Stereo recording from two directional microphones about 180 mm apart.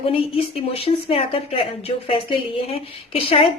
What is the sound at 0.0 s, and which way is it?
A woman's voice, 30° left (ahead or behind).